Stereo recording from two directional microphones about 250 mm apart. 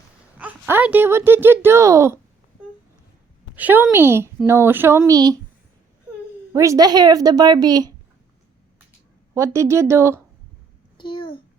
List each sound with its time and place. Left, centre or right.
0.3 s a woman's voice: centre
3.5 s a woman's voice: centre
6.5 s a woman's voice: centre
9.3 s a woman's voice: centre
10.9 s a sound: centre